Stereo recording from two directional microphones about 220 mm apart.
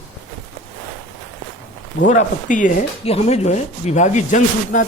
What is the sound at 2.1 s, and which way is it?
Speech, 35° left (ahead or behind).